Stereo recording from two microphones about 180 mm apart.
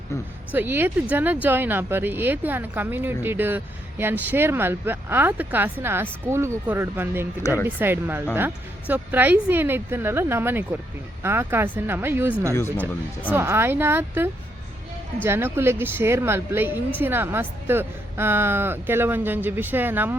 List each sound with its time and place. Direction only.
0.5 s speech: 10° right (ahead or behind)
7.4 s speech: 20° left (ahead or behind)
7.8 s speech: 10° right (ahead or behind)
12.5 s speech: 15° left (ahead or behind)
13.3 s speech: 15° right (ahead or behind)